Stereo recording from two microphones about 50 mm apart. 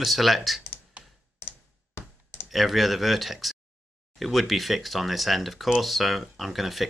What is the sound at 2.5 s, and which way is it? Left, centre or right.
Speech, centre.